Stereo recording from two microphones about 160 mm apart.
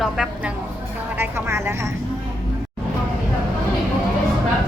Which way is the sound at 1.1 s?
15° right (ahead or behind).